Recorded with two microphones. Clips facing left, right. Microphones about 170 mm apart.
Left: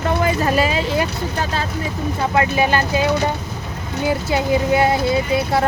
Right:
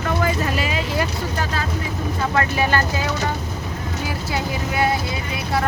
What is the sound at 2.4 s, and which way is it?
Speech, 20° left (ahead or behind).